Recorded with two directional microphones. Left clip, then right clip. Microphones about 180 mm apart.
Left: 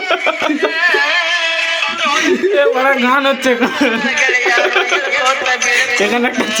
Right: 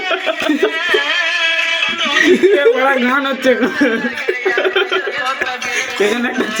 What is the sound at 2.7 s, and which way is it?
Speech, 20° left (ahead or behind).